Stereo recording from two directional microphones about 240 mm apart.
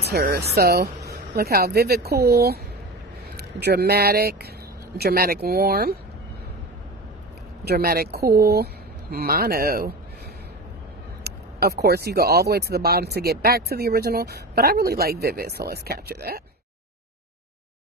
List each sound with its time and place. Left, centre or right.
0.0 s speech: right
7.6 s speech: right
11.2 s speech: right